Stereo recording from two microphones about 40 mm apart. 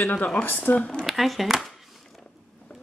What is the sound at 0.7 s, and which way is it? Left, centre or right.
Speech, left.